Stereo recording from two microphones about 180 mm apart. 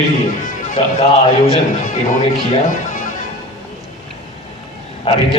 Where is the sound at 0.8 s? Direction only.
30° left (ahead or behind).